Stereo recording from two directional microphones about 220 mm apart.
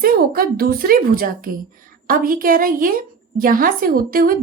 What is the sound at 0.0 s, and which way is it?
A woman's voice, 40° right (ahead or behind).